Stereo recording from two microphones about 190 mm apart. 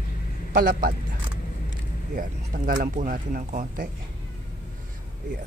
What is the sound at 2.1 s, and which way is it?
Speech, 45° right (ahead or behind).